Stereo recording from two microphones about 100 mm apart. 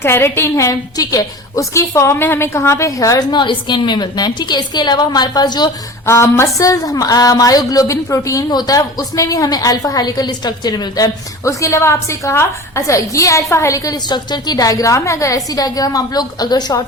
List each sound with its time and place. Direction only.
0.0 s a woman's voice: 25° left (ahead or behind)
1.9 s a woman's voice: 25° left (ahead or behind)
3.3 s a woman's voice: 55° left (ahead or behind)
6.1 s a woman's voice: 25° left (ahead or behind); by 16.8 s 45° left (ahead or behind)